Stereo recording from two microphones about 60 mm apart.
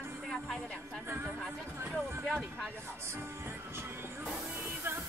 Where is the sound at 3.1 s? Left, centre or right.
Right.